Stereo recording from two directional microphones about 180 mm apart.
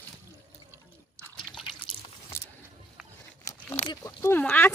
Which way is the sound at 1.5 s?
Centre (ahead or behind).